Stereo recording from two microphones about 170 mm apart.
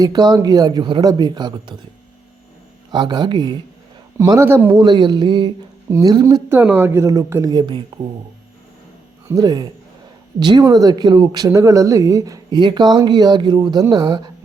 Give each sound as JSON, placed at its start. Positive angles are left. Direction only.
{"t": 0.0, "sound": "speech", "side_deg": -25}
{"t": 2.9, "sound": "a woman's voice", "side_deg": -25}
{"t": 4.7, "sound": "speech", "side_deg": -25}
{"t": 6.6, "sound": "a woman's voice", "side_deg": -10}
{"t": 9.2, "sound": "speech", "side_deg": -20}